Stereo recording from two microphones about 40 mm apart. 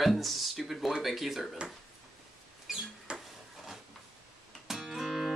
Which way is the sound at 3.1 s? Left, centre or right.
Right.